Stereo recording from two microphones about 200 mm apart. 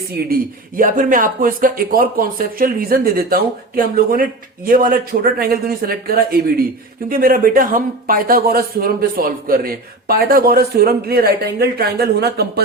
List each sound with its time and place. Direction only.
0.2 s speech: 50° right (ahead or behind)